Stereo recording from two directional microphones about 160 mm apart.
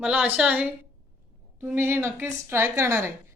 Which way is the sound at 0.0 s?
10° right (ahead or behind).